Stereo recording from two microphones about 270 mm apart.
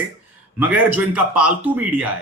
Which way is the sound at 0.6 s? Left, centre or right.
Centre.